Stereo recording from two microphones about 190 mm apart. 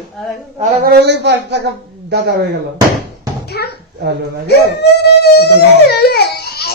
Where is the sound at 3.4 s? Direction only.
60° left (ahead or behind).